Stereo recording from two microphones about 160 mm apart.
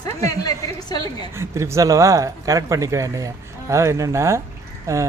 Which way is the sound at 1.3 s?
15° right (ahead or behind).